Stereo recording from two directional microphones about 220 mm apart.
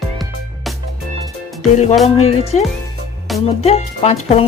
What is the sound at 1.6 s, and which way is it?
Music, 30° left (ahead or behind).